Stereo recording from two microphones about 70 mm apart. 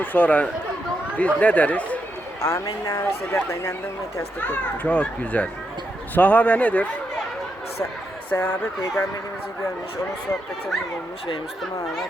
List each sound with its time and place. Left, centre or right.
0.0 s speech: left
2.4 s speech: left
3.3 s speech: left
4.4 s speech: left
8.3 s speech: left